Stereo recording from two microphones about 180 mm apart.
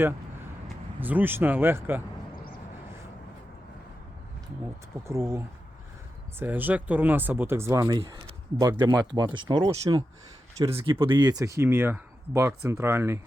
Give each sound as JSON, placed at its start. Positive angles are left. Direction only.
{"t": 0.9, "sound": "speech", "side_deg": -10}
{"t": 5.0, "sound": "speech", "side_deg": -15}